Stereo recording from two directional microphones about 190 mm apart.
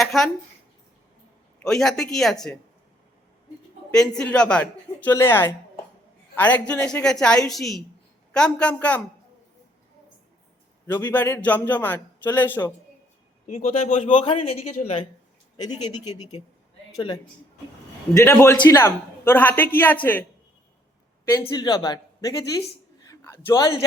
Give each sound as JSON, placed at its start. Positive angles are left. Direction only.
{"t": 0.0, "sound": "a sound", "side_deg": 0}
{"t": 1.6, "sound": "a woman's voice", "side_deg": 0}
{"t": 4.2, "sound": "a man's voice", "side_deg": 5}
{"t": 10.9, "sound": "a man's voice", "side_deg": 10}
{"t": 13.6, "sound": "a man's voice", "side_deg": 45}
{"t": 14.2, "sound": "speech", "side_deg": 30}
{"t": 15.5, "sound": "speech", "side_deg": 20}
{"t": 18.1, "sound": "a man's voice", "side_deg": 15}
{"t": 21.4, "sound": "speech", "side_deg": 20}
{"t": 23.0, "sound": "a sound", "side_deg": 15}